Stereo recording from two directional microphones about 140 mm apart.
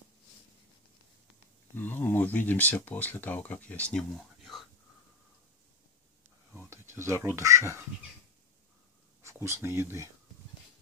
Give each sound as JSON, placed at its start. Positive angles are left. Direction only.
{"t": 1.8, "sound": "speech", "side_deg": 15}
{"t": 6.7, "sound": "a sound", "side_deg": -20}
{"t": 7.3, "sound": "speech", "side_deg": -20}
{"t": 9.2, "sound": "speech", "side_deg": -20}